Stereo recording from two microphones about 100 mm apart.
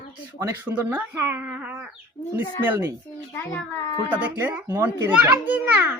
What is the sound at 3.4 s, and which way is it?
Speech, 20° left (ahead or behind).